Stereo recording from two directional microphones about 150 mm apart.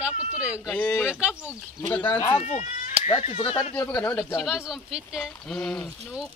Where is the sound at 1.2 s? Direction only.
10° right (ahead or behind).